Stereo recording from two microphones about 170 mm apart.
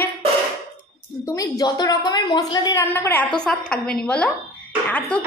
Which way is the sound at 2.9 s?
10° left (ahead or behind).